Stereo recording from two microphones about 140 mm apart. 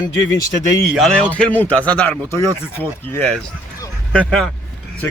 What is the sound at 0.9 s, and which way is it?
A man's voice, 5° left (ahead or behind).